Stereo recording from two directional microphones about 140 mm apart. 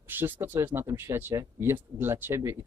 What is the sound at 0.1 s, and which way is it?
Speech, 15° right (ahead or behind).